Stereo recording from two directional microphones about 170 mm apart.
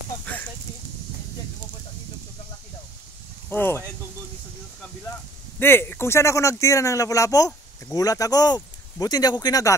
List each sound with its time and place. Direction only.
3.4 s speech: 10° left (ahead or behind)
5.6 s speech: 15° left (ahead or behind)